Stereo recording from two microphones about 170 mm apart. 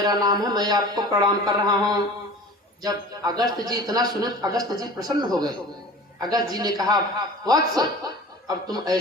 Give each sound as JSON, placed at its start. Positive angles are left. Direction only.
{"t": 0.0, "sound": "a man's voice", "side_deg": -25}